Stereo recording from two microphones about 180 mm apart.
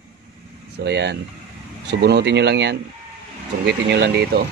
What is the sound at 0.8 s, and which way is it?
Speech, 70° right (ahead or behind).